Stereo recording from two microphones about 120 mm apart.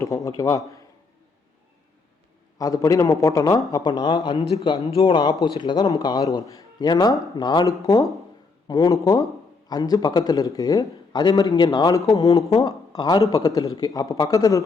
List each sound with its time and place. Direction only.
0.0 s a man's voice: 25° left (ahead or behind)
2.6 s a man's voice: 30° left (ahead or behind)